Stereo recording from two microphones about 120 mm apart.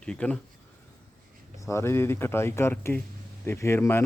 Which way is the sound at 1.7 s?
20° left (ahead or behind).